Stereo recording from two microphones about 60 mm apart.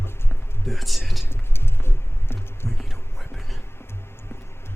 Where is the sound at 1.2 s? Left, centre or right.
Left.